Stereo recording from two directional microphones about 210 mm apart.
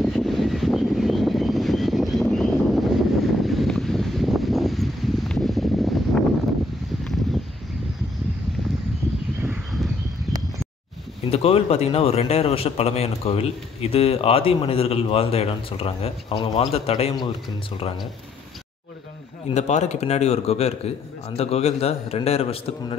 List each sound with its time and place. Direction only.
0.0 s vehicle: centre (ahead or behind)
9.4 s a sound: 5° right (ahead or behind)
11.2 s a man's voice: 30° left (ahead or behind)
19.5 s a man's voice: 30° left (ahead or behind)